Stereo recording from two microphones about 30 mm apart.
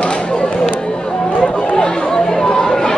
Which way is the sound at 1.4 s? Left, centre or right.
Left.